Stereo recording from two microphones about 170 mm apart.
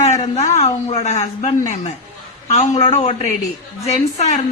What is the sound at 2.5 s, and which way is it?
A man's voice, 40° left (ahead or behind).